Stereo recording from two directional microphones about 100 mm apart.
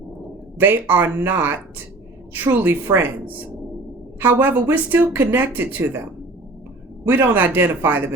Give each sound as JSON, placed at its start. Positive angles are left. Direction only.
{"t": 0.6, "sound": "speech", "side_deg": -20}
{"t": 7.0, "sound": "speech", "side_deg": -20}